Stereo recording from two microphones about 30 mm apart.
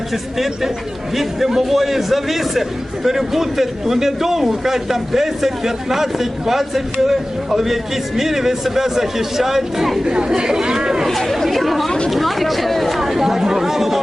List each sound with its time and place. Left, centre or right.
0.1 s a man's voice: centre
10.0 s speech: right
11.2 s speech: centre
13.0 s chatter: centre